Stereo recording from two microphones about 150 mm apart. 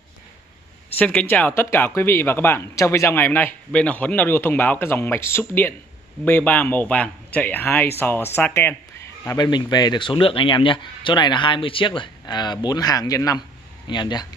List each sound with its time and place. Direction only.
0.9 s a man's voice: 10° left (ahead or behind)
9.5 s speech: 30° left (ahead or behind)